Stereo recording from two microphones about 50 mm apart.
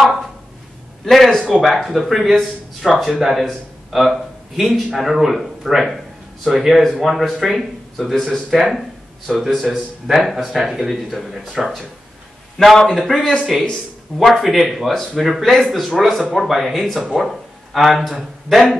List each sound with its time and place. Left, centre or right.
0.0 s a sound: centre
1.0 s speech: centre
12.5 s speech: centre
14.4 s speech: centre